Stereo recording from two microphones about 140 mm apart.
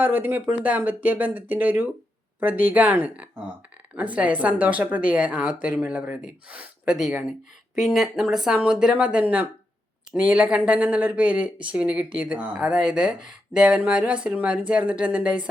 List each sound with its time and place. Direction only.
0.0 s speech: 15° right (ahead or behind)